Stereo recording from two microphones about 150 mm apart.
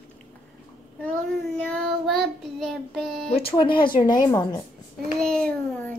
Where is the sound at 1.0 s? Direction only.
10° left (ahead or behind).